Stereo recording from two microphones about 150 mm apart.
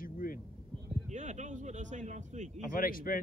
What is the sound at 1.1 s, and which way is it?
A man's voice, 50° right (ahead or behind).